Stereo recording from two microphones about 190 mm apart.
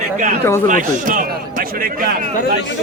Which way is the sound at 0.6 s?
45° right (ahead or behind).